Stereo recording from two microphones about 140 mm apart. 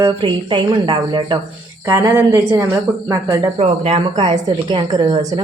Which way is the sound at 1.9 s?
20° right (ahead or behind).